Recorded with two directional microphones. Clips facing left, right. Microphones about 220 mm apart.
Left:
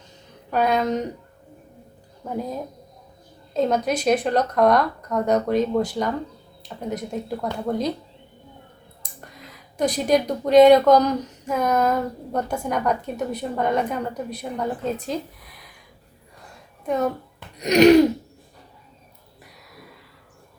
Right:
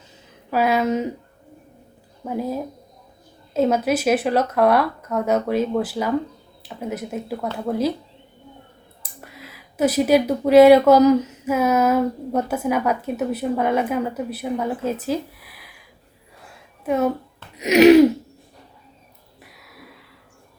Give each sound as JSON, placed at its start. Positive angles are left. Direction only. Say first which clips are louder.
{"t": 0.5, "sound": "speech", "louder": "right 2 dB", "side_deg": -5}
{"t": 2.2, "sound": "speech", "louder": "right 3 dB", "side_deg": -5}
{"t": 9.0, "sound": "speech", "louder": "right 2 dB", "side_deg": -5}
{"t": 16.4, "sound": "a sound", "louder": "right 2 dB", "side_deg": -5}
{"t": 17.6, "sound": "speech", "louder": "right 2 dB", "side_deg": -5}
{"t": 19.5, "sound": "a sound", "louder": "left 2 dB", "side_deg": 0}